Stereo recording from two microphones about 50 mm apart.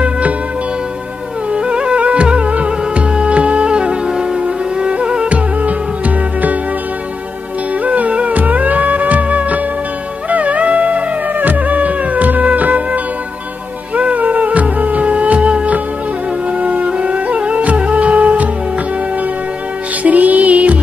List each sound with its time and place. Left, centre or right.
1.5 s music: centre
7.8 s music: right
20.0 s music: right